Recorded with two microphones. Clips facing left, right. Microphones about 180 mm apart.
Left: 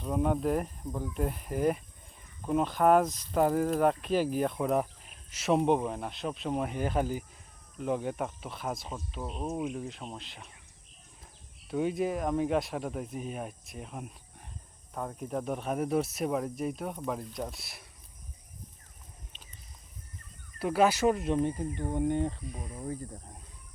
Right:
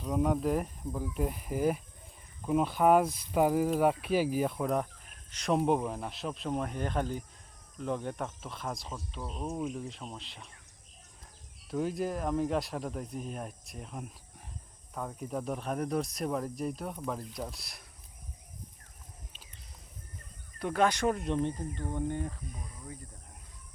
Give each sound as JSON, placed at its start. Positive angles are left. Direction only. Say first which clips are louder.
{"t": 0.0, "sound": "speech", "louder": "even", "side_deg": 0}
{"t": 11.7, "sound": "speech", "louder": "left 3 dB", "side_deg": 0}
{"t": 20.6, "sound": "speech", "louder": "left 3 dB", "side_deg": 5}
{"t": 21.8, "sound": "speech", "louder": "left 6 dB", "side_deg": 20}
{"t": 22.5, "sound": "speech", "louder": "left 8 dB", "side_deg": 40}